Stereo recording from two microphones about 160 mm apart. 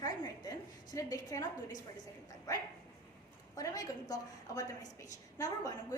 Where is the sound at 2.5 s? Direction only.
20° left (ahead or behind).